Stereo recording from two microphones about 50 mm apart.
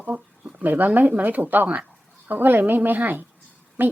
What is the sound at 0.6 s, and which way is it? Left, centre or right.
A woman's voice, right.